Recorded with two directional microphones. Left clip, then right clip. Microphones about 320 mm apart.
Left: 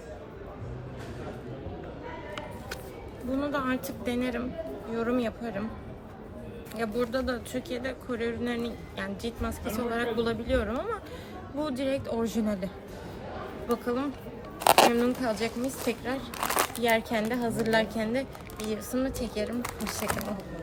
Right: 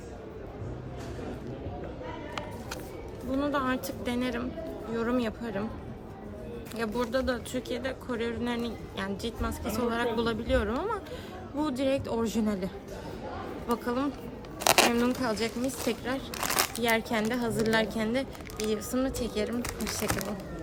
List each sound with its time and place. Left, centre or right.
3.3 s speech: centre
6.7 s speech: centre
19.6 s speech: centre